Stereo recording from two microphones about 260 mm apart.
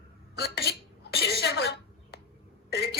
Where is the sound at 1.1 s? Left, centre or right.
Left.